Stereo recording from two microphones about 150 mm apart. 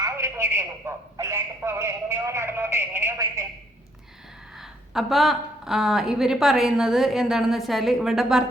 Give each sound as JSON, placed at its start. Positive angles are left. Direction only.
{"t": 0.0, "sound": "a man's voice", "side_deg": -20}
{"t": 4.5, "sound": "a woman's voice", "side_deg": 0}